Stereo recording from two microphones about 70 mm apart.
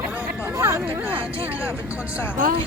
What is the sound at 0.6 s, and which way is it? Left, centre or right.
Speech, right.